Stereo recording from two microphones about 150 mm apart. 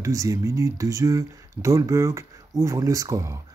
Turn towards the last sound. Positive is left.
turn(degrees=-20)  # may be behind; listen again after turning